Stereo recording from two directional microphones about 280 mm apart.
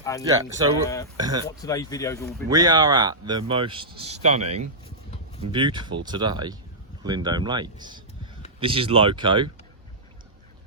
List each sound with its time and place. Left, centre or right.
0.0 s speech: centre
0.3 s speech: centre
1.5 s speech: centre
2.5 s speech: centre
5.5 s speech: centre